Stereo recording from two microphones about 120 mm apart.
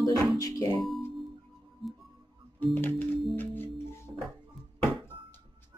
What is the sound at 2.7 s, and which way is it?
Organ, 15° left (ahead or behind).